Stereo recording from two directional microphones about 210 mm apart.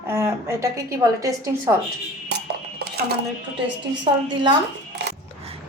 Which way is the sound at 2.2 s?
55° right (ahead or behind).